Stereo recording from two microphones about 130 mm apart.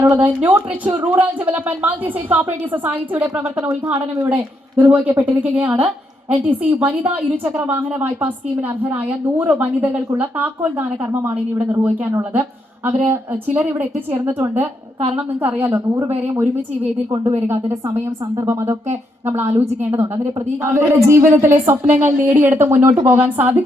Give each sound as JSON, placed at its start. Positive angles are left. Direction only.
{"t": 0.0, "sound": "a woman's voice", "side_deg": -15}
{"t": 17.5, "sound": "a woman's voice", "side_deg": -20}
{"t": 19.5, "sound": "a woman's voice", "side_deg": -55}
{"t": 19.8, "sound": "a woman's voice", "side_deg": -20}